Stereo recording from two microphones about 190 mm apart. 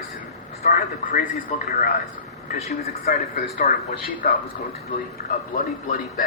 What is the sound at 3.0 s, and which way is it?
A man's voice, 50° left (ahead or behind).